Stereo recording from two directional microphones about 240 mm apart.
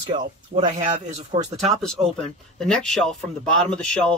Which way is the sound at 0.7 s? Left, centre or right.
Right.